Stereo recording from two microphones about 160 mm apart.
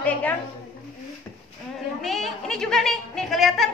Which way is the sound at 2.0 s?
Centre (ahead or behind).